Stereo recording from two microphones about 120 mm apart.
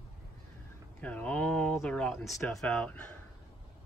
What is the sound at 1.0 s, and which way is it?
Speech, 10° left (ahead or behind).